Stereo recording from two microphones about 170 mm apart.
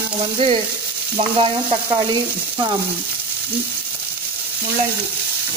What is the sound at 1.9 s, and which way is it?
Frying, 25° right (ahead or behind).